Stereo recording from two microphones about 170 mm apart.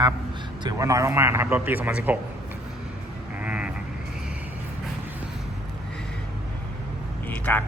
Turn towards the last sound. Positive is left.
turn(degrees=10)  # may be behind; listen again after turning